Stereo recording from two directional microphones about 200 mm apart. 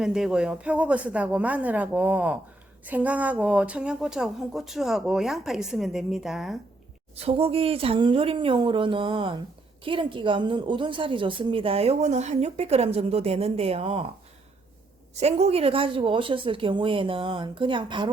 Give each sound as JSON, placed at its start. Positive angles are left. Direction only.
{"t": 0.0, "sound": "a woman's voice", "side_deg": 0}
{"t": 7.2, "sound": "a woman's voice", "side_deg": -30}
{"t": 15.1, "sound": "a woman's voice", "side_deg": -35}